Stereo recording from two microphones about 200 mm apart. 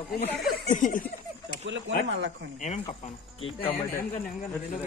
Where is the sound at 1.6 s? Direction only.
65° right (ahead or behind).